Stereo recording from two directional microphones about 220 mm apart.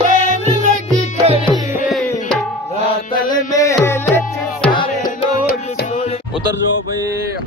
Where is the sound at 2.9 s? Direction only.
15° left (ahead or behind).